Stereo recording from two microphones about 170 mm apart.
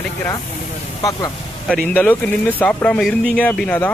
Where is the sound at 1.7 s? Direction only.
10° left (ahead or behind).